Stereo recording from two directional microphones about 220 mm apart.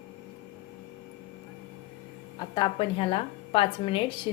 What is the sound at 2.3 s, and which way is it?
A woman's voice, 20° left (ahead or behind).